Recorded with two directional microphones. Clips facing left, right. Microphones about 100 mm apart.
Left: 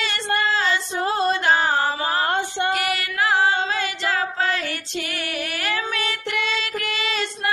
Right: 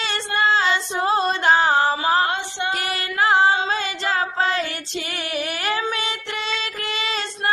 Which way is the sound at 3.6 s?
25° right (ahead or behind).